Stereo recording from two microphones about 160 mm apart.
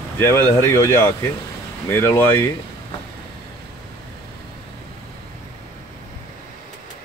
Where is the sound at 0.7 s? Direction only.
15° left (ahead or behind).